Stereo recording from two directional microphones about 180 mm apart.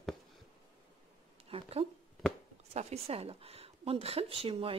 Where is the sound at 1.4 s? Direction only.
35° right (ahead or behind).